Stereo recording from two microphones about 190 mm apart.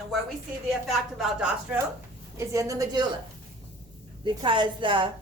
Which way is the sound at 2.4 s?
15° right (ahead or behind).